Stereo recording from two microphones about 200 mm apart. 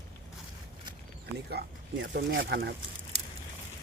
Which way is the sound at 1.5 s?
55° right (ahead or behind).